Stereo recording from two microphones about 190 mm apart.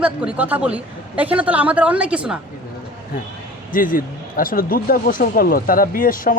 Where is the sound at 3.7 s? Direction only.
45° left (ahead or behind).